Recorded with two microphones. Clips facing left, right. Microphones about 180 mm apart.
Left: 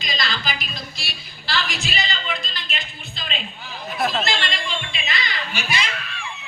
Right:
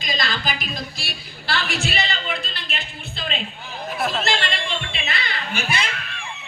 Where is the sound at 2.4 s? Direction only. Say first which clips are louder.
Right 1 dB; 60° right (ahead or behind).